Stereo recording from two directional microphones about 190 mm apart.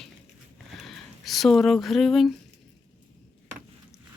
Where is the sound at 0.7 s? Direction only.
Centre (ahead or behind).